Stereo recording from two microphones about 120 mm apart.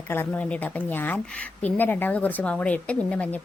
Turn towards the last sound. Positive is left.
turn(degrees=10)  # may be behind; listen again after turning